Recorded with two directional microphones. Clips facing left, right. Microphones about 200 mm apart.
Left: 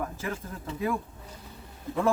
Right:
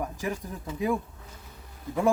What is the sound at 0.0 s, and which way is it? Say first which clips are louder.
Speech: right 2 dB; 15° right (ahead or behind).